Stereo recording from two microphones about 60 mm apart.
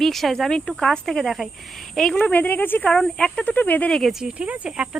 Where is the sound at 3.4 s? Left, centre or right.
Left.